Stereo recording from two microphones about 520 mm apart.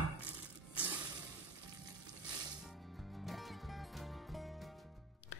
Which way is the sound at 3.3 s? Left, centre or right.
Centre.